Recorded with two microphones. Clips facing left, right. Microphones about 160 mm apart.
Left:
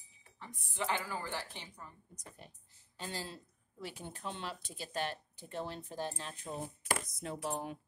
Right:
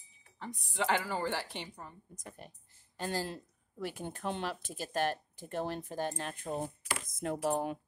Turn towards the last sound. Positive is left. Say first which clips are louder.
# right 7 dB
turn(degrees=-55)  # may be behind; listen again after turning